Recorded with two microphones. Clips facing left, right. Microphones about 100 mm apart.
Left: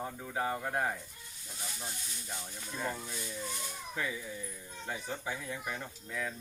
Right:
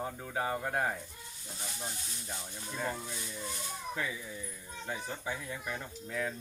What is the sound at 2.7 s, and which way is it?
Speech, 5° right (ahead or behind).